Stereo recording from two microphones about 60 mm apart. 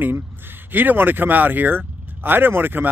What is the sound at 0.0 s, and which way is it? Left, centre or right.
Speech, right.